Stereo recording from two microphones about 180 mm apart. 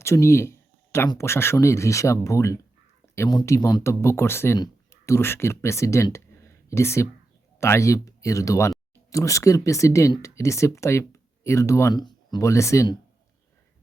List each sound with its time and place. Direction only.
0.0 s speech: 15° left (ahead or behind)